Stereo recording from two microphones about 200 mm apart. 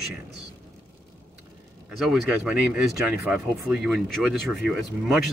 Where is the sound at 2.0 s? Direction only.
5° right (ahead or behind).